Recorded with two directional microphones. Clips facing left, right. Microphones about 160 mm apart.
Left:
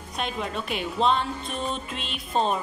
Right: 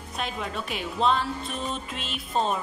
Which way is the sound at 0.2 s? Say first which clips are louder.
Left 2 dB; centre (ahead or behind).